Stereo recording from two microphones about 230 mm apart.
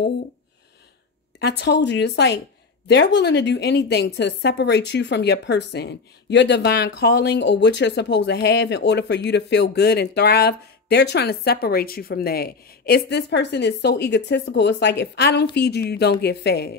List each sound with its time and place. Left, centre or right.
1.4 s a woman's voice: left